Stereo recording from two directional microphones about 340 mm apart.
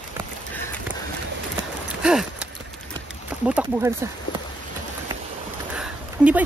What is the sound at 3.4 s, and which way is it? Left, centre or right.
Speech, centre.